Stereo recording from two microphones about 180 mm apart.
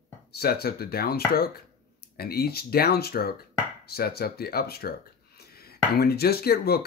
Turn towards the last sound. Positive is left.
turn(degrees=60)  # may be behind; listen again after turning